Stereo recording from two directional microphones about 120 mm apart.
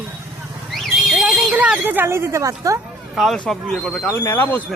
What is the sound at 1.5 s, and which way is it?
A woman's voice, 10° right (ahead or behind).